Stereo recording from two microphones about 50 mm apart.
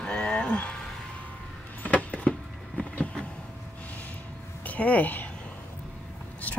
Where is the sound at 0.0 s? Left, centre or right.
Left.